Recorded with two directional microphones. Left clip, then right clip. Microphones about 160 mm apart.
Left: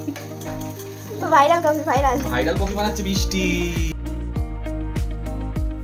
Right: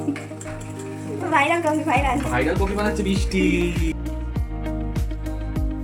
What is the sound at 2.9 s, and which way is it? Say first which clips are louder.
Music: even; 40° left (ahead or behind).